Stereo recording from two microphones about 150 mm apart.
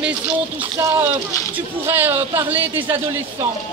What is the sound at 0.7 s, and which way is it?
Speech, 15° right (ahead or behind).